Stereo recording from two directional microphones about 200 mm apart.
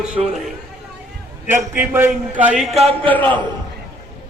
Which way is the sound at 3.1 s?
10° left (ahead or behind).